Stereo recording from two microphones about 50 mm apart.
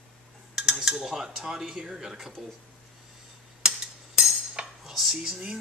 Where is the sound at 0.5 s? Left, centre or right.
Centre.